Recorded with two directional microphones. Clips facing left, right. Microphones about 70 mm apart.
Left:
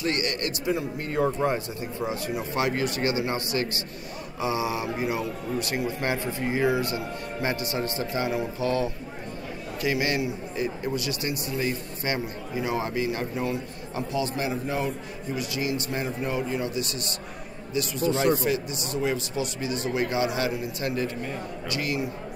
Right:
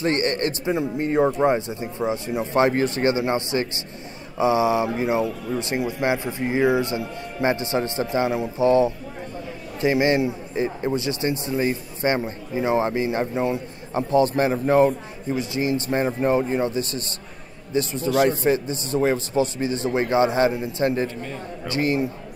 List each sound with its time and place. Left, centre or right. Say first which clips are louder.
0.0 s speech: right 6 dB; right
14.1 s a man's voice: right 10 dB; right